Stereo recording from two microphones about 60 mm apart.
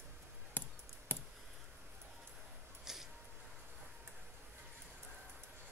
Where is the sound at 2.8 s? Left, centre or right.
Centre.